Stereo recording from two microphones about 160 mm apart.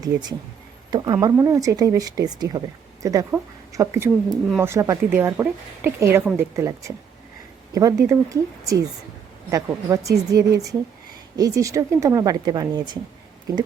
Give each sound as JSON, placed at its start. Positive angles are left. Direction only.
{"t": 0.0, "sound": "a woman's voice", "side_deg": -25}